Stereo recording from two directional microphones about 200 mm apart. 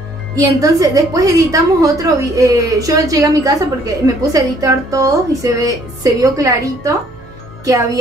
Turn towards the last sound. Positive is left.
turn(degrees=-15)  # may be behind; listen again after turning